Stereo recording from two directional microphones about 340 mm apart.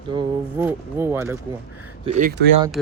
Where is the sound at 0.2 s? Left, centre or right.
Centre.